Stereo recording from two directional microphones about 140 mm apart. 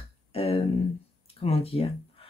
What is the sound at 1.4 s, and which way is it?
Speech, 45° left (ahead or behind).